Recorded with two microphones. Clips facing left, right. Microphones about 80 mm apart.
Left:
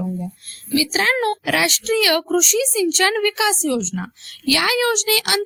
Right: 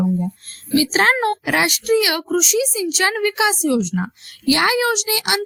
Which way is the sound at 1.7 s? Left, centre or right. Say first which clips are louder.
Right 1 dB; centre.